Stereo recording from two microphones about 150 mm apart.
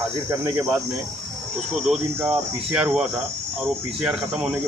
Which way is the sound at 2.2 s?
10° right (ahead or behind).